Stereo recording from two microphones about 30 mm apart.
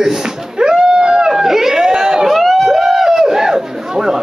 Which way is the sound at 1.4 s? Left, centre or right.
Centre.